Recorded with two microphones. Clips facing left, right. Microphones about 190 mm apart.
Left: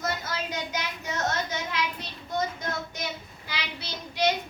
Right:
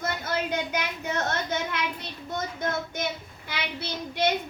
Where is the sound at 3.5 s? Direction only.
55° right (ahead or behind).